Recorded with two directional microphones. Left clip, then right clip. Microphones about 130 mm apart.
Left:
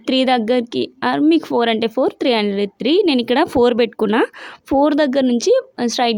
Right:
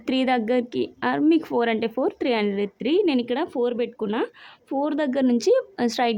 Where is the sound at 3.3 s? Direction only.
65° left (ahead or behind).